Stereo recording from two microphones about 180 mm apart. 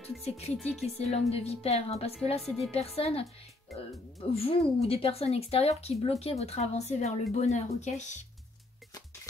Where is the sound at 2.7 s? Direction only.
35° left (ahead or behind).